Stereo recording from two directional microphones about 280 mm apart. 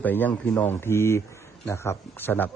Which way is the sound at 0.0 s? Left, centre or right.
Centre.